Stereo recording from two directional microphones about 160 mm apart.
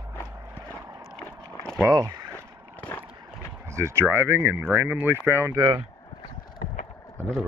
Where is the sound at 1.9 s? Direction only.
20° right (ahead or behind).